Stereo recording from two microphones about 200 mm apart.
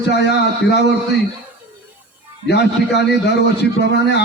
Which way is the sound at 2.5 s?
55° left (ahead or behind).